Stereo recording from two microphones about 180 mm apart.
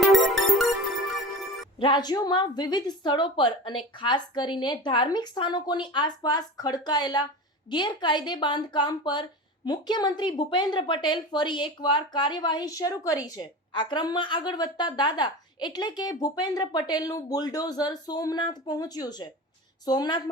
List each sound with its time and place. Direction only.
0.1 s music: centre (ahead or behind)
1.8 s a woman's voice: 25° left (ahead or behind)